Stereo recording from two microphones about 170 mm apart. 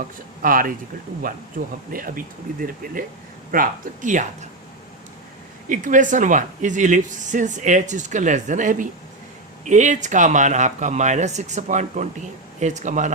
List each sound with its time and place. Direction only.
0.4 s speech: 55° right (ahead or behind)
1.9 s speech: 55° right (ahead or behind)
5.6 s speech: 50° right (ahead or behind)